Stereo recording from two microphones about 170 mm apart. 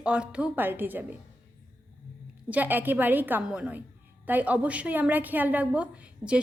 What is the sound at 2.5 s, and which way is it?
A woman's voice, 10° right (ahead or behind).